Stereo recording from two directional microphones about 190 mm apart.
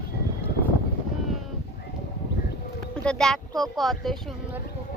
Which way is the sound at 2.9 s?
5° left (ahead or behind).